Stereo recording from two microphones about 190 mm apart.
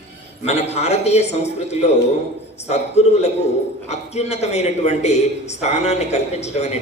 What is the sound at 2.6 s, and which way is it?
A woman's voice, 35° left (ahead or behind).